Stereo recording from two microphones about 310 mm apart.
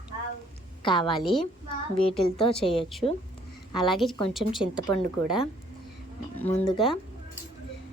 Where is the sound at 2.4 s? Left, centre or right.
Centre.